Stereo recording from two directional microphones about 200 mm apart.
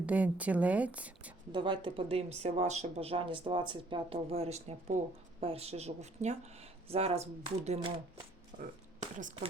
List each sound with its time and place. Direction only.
0.0 s speech: 5° right (ahead or behind)
1.5 s a woman's voice: 25° right (ahead or behind)